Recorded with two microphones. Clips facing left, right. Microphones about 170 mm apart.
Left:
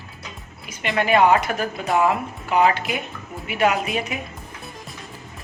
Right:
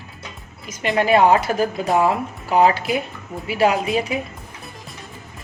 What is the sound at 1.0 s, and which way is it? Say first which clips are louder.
Speech: right 2 dB; 35° right (ahead or behind).